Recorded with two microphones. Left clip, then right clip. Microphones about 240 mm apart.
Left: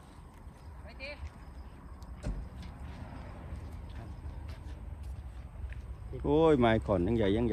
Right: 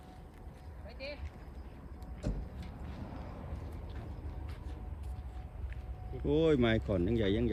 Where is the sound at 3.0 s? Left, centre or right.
Left.